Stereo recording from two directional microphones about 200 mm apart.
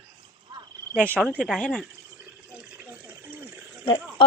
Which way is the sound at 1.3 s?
Centre (ahead or behind).